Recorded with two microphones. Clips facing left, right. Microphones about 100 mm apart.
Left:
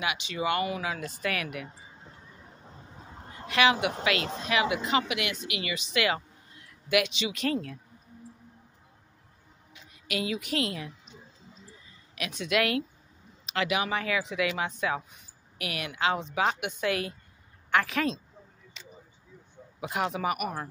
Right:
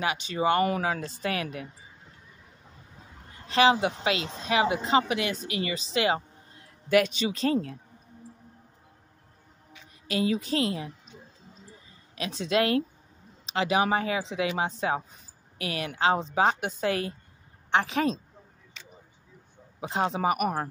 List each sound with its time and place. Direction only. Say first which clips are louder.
0.0 s speech: right 4 dB; 40° right (ahead or behind)
3.1 s a sound: left 6 dB; 30° left (ahead or behind)
3.4 s a woman's voice: right 3 dB; 30° right (ahead or behind)
10.0 s speech: right 5 dB; 35° right (ahead or behind)
12.2 s a woman's voice: right 2 dB; 30° right (ahead or behind)
19.8 s speech: right 3 dB; 30° right (ahead or behind)